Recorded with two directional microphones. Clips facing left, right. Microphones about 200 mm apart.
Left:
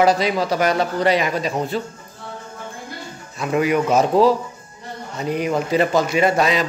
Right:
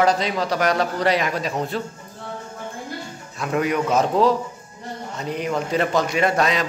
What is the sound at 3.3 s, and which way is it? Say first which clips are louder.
A man's voice: left 3 dB; 5° left (ahead or behind).